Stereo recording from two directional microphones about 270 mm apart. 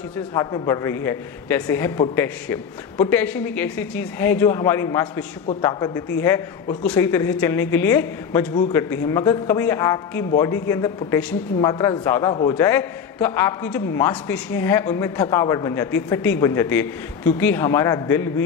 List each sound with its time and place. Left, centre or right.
0.3 s a man's voice: centre